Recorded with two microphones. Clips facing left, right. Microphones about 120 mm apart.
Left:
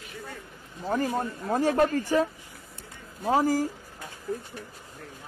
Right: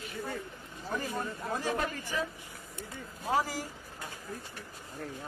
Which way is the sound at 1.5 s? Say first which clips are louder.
Left 11 dB; 55° left (ahead or behind).